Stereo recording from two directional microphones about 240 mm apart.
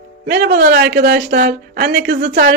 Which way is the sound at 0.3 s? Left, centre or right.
Right.